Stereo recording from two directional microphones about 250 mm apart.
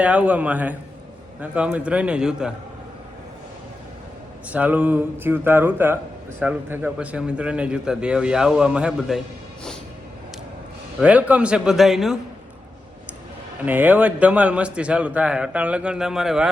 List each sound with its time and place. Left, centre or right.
0.0 s a man's voice: centre
4.4 s a man's voice: centre
11.0 s a man's voice: centre
13.7 s a man's voice: centre